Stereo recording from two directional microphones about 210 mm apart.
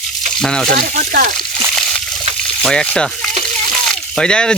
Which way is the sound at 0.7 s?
40° right (ahead or behind).